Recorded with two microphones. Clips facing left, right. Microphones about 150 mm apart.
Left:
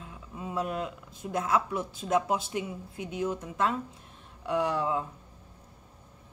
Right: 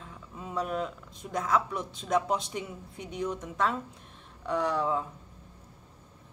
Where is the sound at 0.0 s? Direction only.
10° left (ahead or behind).